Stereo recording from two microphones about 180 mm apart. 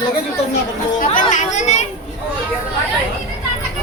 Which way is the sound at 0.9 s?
45° left (ahead or behind).